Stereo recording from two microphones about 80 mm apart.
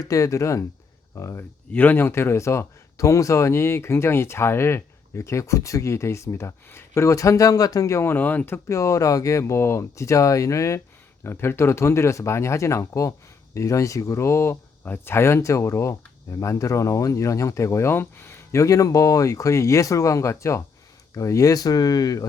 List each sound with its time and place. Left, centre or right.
0.0 s speech: left
1.7 s speech: left
8.1 s speech: left
8.7 s speech: left
11.2 s speech: left